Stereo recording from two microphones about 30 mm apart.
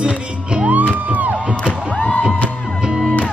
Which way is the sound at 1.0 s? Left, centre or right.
Right.